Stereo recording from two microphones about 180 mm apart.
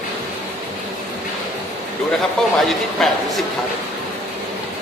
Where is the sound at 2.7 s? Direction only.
Centre (ahead or behind).